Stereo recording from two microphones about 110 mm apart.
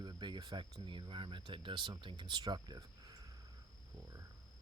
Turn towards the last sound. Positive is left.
turn(degrees=-40)  # may be behind; listen again after turning